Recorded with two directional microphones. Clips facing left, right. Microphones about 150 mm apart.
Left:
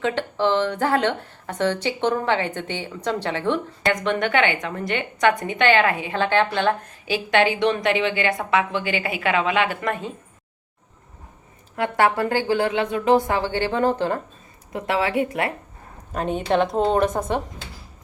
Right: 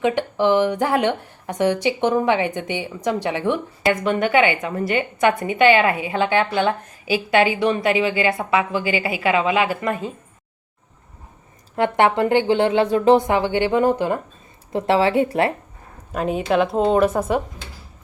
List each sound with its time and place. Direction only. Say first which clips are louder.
0.0 s speech: right 3 dB; 15° right (ahead or behind)
11.8 s speech: right 3 dB; 20° right (ahead or behind)
14.7 s speech: right 5 dB; 30° right (ahead or behind)
16.1 s a woman's voice: right 2 dB; 5° right (ahead or behind)